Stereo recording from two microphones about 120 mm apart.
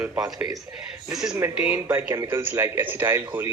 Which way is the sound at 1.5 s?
15° right (ahead or behind).